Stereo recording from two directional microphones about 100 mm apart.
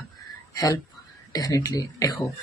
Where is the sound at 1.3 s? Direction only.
40° left (ahead or behind).